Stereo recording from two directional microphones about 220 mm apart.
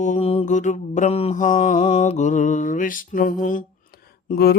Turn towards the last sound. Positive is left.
turn(degrees=45)  # may be behind; listen again after turning